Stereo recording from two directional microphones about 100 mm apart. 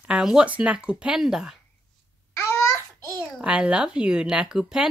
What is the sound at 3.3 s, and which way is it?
Speech, 10° right (ahead or behind).